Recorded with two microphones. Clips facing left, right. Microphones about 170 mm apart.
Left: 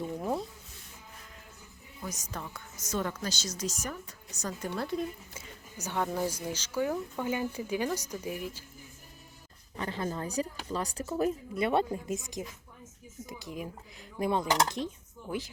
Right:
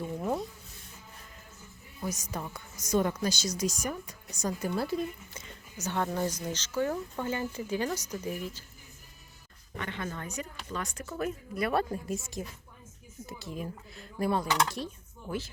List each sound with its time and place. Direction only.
0.2 s a sound: centre (ahead or behind)
2.0 s a woman's voice: 10° right (ahead or behind)
5.8 s speech: 5° left (ahead or behind)
9.7 s speech: 35° left (ahead or behind)